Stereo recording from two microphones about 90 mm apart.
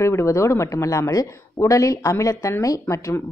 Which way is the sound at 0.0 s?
30° left (ahead or behind).